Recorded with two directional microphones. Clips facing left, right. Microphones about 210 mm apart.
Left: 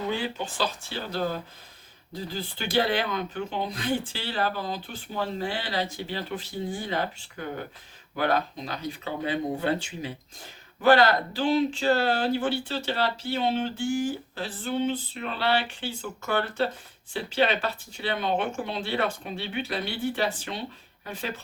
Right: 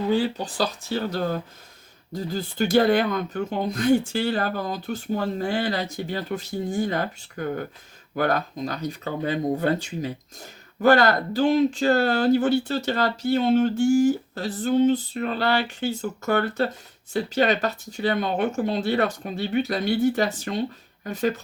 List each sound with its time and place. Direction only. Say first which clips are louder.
0.1 s speech: right 7 dB; 35° right (ahead or behind)